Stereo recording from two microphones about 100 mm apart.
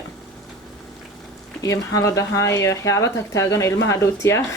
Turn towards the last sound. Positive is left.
turn(degrees=30)  # may be behind; listen again after turning